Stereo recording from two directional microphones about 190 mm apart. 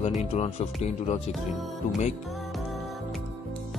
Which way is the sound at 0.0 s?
35° left (ahead or behind).